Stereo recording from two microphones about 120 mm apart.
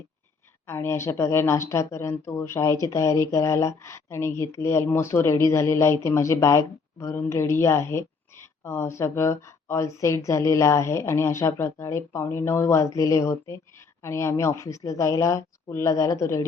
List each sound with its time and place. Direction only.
0.7 s speech: 20° left (ahead or behind)